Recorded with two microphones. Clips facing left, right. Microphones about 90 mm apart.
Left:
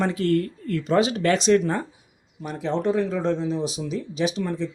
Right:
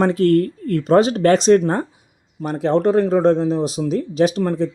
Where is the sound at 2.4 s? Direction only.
55° right (ahead or behind).